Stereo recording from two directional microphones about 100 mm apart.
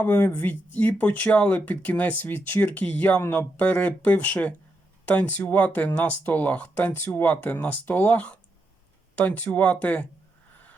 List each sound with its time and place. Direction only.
0.0 s speech: 20° left (ahead or behind)